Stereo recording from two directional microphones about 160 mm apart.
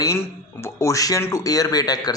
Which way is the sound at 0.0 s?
15° left (ahead or behind).